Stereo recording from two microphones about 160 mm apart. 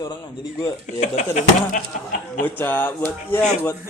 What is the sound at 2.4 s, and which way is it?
Speech, 10° left (ahead or behind).